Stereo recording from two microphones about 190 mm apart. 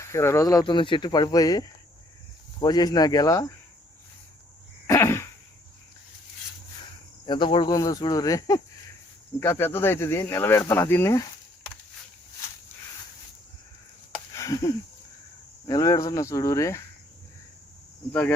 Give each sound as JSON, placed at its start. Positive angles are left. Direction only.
{"t": 0.0, "sound": "speech", "side_deg": 15}
{"t": 4.9, "sound": "a sound", "side_deg": 15}
{"t": 7.3, "sound": "speech", "side_deg": 25}
{"t": 14.3, "sound": "a sound", "side_deg": 15}
{"t": 15.6, "sound": "speech", "side_deg": 20}
{"t": 18.1, "sound": "speech", "side_deg": 10}